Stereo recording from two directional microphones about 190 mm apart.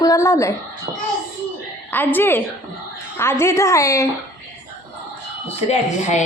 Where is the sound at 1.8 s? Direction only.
10° left (ahead or behind).